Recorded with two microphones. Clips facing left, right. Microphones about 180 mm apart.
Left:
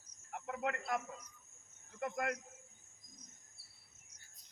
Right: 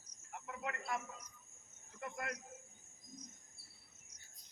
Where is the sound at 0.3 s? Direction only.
60° left (ahead or behind).